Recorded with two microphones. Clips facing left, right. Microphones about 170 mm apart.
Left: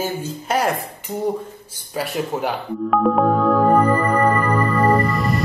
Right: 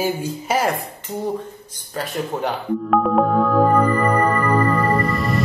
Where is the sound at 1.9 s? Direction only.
10° left (ahead or behind).